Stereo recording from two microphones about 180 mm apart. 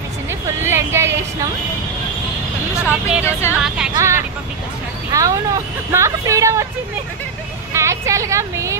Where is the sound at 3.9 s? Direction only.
15° right (ahead or behind).